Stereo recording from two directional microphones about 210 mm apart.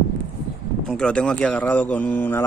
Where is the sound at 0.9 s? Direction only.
5° left (ahead or behind).